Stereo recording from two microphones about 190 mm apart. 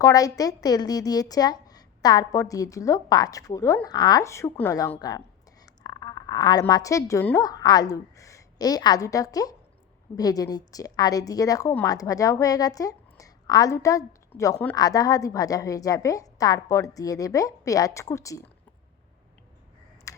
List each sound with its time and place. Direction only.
0.0 s a woman's voice: 20° left (ahead or behind)
20.1 s computer keyboard: 15° left (ahead or behind)